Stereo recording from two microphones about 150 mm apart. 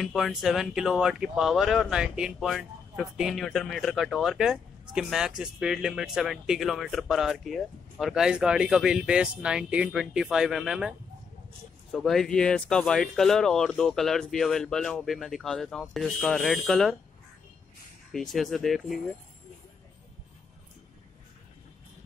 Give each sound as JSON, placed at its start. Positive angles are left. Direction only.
{"t": 0.0, "sound": "speech", "side_deg": 0}
{"t": 18.1, "sound": "speech", "side_deg": 0}